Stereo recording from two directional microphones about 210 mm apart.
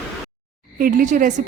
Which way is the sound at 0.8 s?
40° right (ahead or behind).